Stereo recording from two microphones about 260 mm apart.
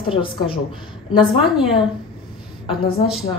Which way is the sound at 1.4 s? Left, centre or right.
Centre.